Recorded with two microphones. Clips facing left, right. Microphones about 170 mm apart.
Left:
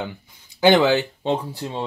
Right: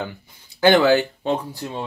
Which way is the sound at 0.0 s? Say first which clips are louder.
Even; 15° left (ahead or behind).